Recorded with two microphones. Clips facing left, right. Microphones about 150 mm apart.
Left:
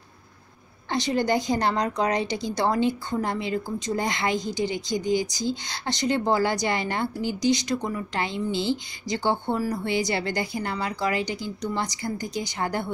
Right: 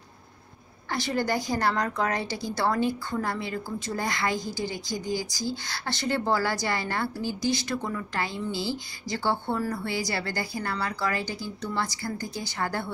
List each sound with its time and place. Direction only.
0.8 s a woman's voice: 20° left (ahead or behind)